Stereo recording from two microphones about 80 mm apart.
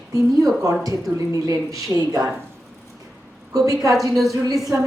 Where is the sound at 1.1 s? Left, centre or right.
Right.